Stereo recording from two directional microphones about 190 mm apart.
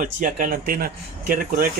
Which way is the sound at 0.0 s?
45° right (ahead or behind).